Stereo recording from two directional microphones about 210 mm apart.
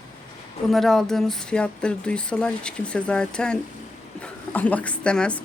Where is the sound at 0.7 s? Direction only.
Centre (ahead or behind).